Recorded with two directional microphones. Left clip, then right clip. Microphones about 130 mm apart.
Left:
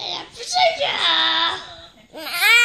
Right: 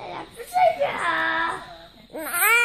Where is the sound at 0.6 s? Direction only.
15° left (ahead or behind).